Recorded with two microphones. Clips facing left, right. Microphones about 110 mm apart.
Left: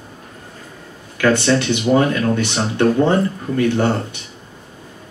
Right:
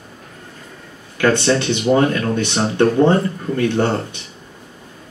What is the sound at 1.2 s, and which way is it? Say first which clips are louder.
Speech: even; 20° right (ahead or behind).